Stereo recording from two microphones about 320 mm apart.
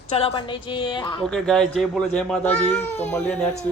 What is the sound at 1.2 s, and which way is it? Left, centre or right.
Speech, centre.